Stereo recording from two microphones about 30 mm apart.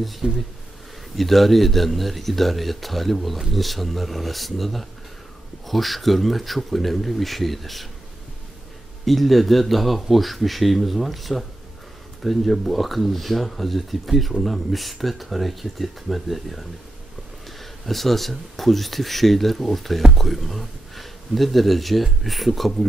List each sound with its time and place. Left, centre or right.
0.2 s speech: right
1.1 s speech: centre
9.0 s speech: centre